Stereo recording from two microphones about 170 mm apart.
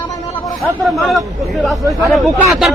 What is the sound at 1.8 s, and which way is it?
Speech, 20° right (ahead or behind).